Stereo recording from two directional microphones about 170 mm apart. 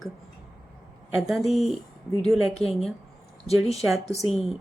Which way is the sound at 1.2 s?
Centre (ahead or behind).